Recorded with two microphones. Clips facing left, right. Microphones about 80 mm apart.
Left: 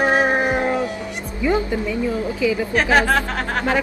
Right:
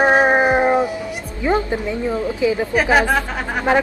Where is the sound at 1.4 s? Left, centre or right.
Right.